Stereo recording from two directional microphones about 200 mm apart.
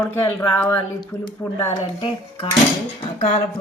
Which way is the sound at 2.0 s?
25° left (ahead or behind).